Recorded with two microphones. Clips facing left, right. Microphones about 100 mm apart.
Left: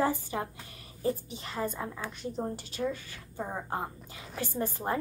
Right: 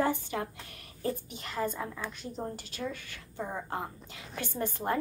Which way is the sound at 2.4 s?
15° left (ahead or behind).